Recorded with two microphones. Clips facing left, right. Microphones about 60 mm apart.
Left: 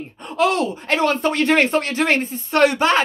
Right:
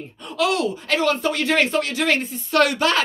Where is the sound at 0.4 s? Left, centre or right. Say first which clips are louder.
Left 2 dB; left.